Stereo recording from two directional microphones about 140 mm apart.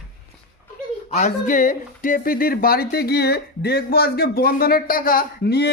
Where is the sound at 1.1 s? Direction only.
65° left (ahead or behind); by 5.2 s 90° left.